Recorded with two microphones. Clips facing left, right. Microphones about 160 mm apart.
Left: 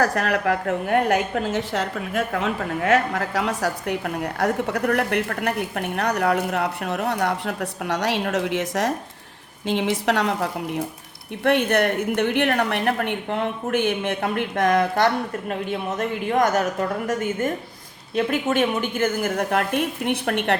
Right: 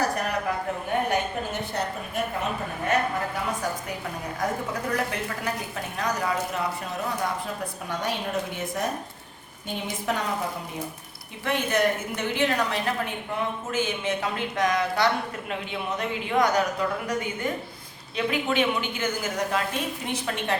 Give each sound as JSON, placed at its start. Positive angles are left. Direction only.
{"t": 0.0, "sound": "a woman's voice", "side_deg": 90}
{"t": 11.4, "sound": "a woman's voice", "side_deg": 65}